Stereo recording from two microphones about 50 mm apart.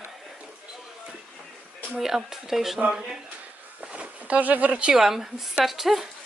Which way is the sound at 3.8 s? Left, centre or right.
Right.